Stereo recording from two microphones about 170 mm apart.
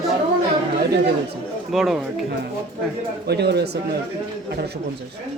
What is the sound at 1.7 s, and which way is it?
Speech, 5° right (ahead or behind).